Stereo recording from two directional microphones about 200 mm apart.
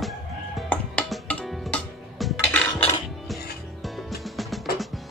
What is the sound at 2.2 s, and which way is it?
Dishes, 5° left (ahead or behind).